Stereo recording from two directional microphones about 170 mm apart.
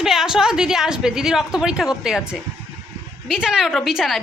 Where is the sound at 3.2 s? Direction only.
5° right (ahead or behind).